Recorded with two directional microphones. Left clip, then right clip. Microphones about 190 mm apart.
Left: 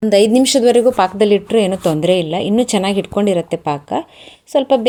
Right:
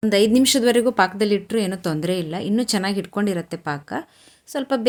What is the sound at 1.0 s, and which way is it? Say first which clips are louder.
Speech: left 6 dB; 45° right (ahead or behind).